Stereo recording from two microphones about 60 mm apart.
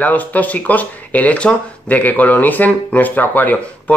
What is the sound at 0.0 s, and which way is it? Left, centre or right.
Speech, left.